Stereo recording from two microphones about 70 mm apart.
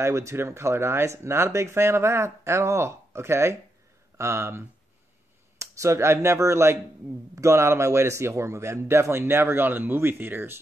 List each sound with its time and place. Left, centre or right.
0.0 s speech: right